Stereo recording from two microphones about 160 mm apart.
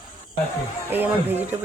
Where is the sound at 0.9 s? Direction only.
10° right (ahead or behind).